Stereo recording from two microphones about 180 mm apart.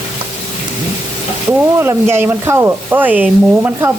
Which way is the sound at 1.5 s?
15° right (ahead or behind).